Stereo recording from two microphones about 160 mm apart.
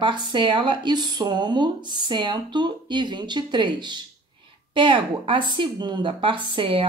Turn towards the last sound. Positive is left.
turn(degrees=-30)  # may be behind; listen again after turning